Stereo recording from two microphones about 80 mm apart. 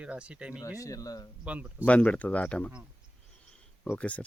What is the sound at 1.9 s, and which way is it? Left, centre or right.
Speech, centre.